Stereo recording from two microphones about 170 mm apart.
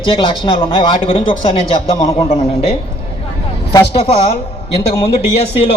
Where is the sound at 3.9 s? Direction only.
35° left (ahead or behind).